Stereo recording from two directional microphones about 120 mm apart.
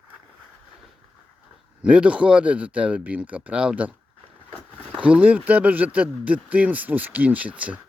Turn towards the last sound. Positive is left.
turn(degrees=-10)  # may be behind; listen again after turning